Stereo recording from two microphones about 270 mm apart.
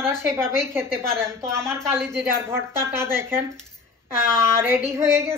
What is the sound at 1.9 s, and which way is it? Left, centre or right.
A woman's voice, centre.